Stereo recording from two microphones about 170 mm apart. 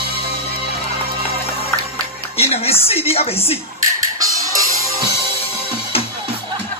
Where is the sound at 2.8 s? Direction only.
35° left (ahead or behind).